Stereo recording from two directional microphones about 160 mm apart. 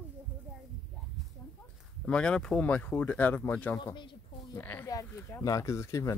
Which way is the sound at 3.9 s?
30° left (ahead or behind).